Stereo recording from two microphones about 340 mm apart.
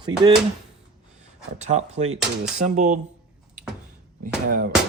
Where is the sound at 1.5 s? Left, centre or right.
Centre.